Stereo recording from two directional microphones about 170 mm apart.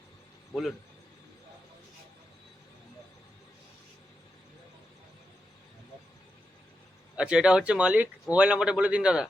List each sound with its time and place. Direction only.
7.2 s speech: 5° right (ahead or behind)